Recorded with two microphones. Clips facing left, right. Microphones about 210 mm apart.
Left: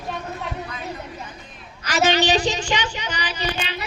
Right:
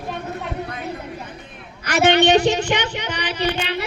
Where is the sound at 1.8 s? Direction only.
60° right (ahead or behind).